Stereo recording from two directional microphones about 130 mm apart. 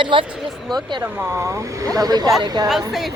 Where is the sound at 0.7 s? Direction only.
35° right (ahead or behind).